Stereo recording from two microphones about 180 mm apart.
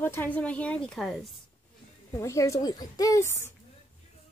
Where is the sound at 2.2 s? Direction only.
15° left (ahead or behind).